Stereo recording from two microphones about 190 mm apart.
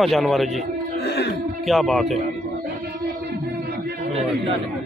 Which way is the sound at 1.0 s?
60° left (ahead or behind).